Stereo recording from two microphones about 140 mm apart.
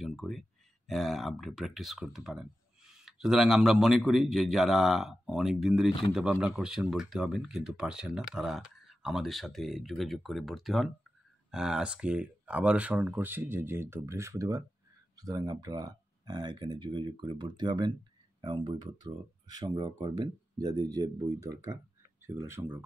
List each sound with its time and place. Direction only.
0.0 s speech: centre (ahead or behind); by 22.8 s 15° right (ahead or behind)